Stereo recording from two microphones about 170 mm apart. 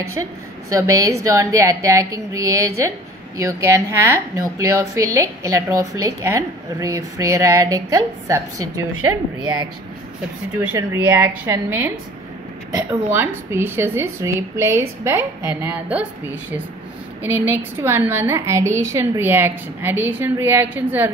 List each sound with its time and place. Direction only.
0.0 s a woman's voice: 15° right (ahead or behind)
10.6 s a woman's voice: 15° right (ahead or behind)
13.5 s a woman's voice: 15° right (ahead or behind)
17.2 s a woman's voice: 10° right (ahead or behind)